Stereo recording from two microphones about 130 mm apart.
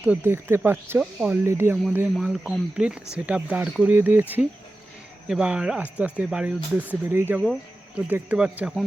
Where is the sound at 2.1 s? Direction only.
5° right (ahead or behind).